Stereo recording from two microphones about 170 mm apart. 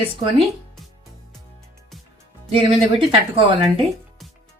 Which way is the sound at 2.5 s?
30° right (ahead or behind).